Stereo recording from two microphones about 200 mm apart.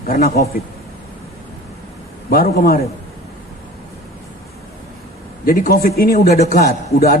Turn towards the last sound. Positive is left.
turn(degrees=50)  # may be behind; listen again after turning